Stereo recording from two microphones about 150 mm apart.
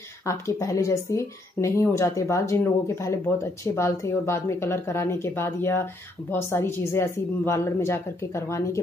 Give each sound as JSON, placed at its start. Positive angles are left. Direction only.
{"t": 0.3, "sound": "speech", "side_deg": 20}